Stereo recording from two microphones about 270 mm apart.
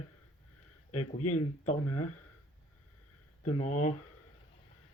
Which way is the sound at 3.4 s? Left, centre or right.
Left.